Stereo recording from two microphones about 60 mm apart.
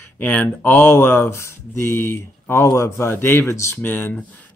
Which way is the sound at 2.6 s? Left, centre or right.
Left.